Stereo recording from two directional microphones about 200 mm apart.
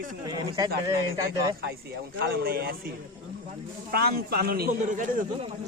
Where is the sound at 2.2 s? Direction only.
55° right (ahead or behind).